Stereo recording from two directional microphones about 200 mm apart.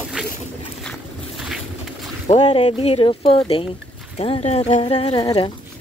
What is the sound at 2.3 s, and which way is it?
Speech, 30° left (ahead or behind).